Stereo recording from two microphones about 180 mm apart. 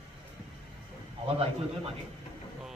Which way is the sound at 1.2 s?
35° right (ahead or behind).